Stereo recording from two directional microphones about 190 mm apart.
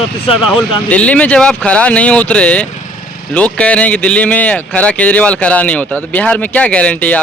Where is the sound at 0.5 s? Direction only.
5° left (ahead or behind).